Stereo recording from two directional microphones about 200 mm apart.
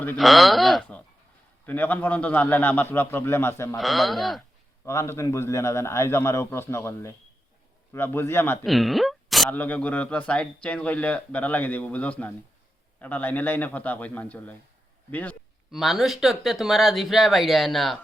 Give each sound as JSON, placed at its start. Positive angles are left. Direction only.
{"t": 0.0, "sound": "speech", "side_deg": 5}
{"t": 3.8, "sound": "speech", "side_deg": 0}
{"t": 4.9, "sound": "speech", "side_deg": 15}
{"t": 8.6, "sound": "speech", "side_deg": 0}